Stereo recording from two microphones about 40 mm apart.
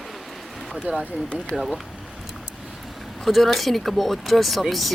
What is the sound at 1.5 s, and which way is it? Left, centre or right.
Speech, centre.